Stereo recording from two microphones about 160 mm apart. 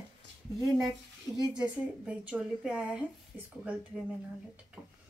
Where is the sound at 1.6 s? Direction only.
5° right (ahead or behind).